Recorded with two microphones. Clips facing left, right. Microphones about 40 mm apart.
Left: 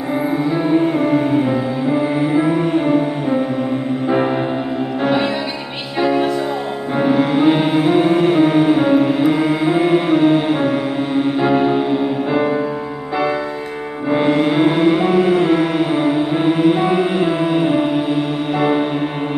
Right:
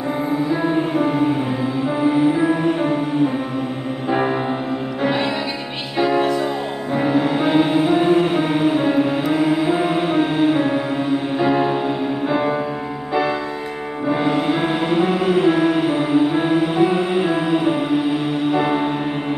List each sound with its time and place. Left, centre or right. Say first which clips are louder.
2.3 s music: left 2 dB; centre
5.0 s music: left 2 dB; centre
7.0 s music: left 4 dB; left
8.3 s music: left 5 dB; centre
11.3 s music: left 2 dB; centre
12.3 s music: left 1 dB; centre
14.1 s music: left 5 dB; left
15.0 s music: left 3 dB; centre
16.5 s music: left 2 dB; left
17.2 s music: left 2 dB; centre